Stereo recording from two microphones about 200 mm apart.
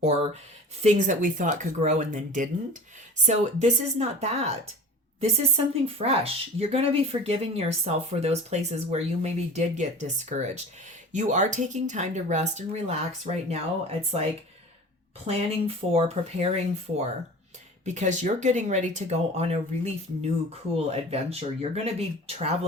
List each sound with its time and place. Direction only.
0.8 s a woman's voice: 35° right (ahead or behind)
15.3 s a woman's voice: 30° right (ahead or behind)